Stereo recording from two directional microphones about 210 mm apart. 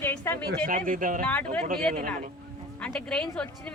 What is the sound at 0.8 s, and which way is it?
Speech, 40° right (ahead or behind).